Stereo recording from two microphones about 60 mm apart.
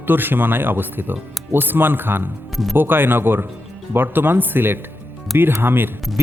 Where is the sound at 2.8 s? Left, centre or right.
Right.